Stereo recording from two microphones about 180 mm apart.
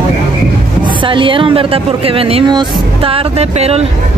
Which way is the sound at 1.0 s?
30° right (ahead or behind).